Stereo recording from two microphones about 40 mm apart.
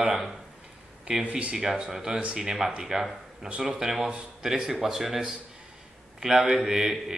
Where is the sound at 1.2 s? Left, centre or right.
Right.